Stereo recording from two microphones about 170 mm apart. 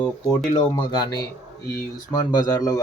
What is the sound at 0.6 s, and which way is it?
Speech, 25° left (ahead or behind).